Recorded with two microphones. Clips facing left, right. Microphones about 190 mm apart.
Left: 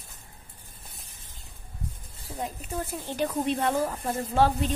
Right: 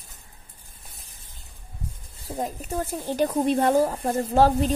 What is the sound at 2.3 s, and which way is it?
Speech, 40° right (ahead or behind).